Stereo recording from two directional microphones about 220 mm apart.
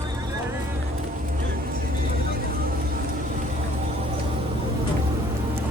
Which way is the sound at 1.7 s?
45° right (ahead or behind).